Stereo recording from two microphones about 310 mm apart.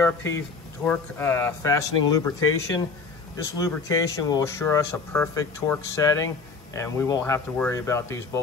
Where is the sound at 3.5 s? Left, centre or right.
Centre.